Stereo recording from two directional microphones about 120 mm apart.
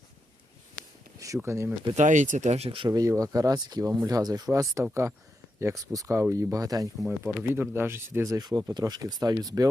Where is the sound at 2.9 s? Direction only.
30° right (ahead or behind).